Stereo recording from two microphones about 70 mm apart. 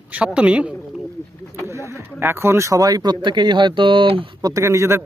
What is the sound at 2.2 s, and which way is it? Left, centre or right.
Speech, right.